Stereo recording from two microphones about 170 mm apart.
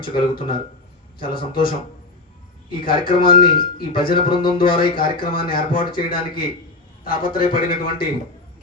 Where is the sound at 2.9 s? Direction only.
30° left (ahead or behind).